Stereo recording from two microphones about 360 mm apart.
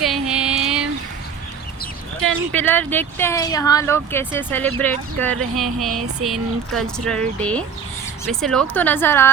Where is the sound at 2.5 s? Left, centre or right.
Centre.